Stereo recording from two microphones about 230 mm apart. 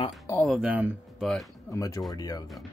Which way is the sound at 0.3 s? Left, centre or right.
Centre.